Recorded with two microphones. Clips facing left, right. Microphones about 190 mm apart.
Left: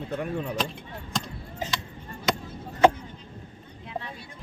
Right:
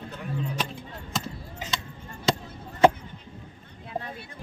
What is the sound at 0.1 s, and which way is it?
Speech, 60° left (ahead or behind).